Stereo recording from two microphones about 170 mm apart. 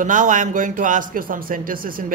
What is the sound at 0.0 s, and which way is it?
A man's voice, 50° right (ahead or behind).